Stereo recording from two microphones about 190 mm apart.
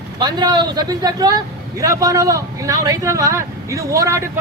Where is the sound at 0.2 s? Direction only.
20° right (ahead or behind).